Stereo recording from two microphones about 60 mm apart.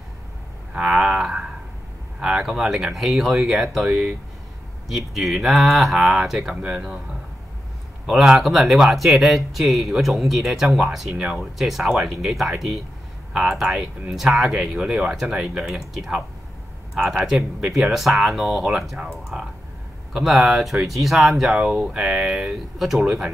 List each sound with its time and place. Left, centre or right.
0.7 s a sound: centre
2.1 s speech: centre
6.5 s speech: centre
8.1 s speech: centre